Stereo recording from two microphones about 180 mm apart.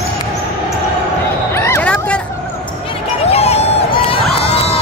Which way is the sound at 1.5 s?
15° left (ahead or behind).